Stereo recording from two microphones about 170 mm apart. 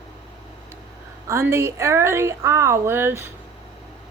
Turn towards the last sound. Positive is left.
turn(degrees=-15)  # may be behind; listen again after turning